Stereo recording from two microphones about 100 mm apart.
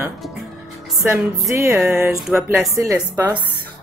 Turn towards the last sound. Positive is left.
turn(degrees=-30)  # may be behind; listen again after turning